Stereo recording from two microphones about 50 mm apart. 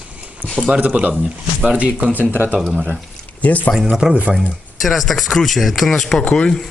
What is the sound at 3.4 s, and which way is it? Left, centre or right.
Speech, left.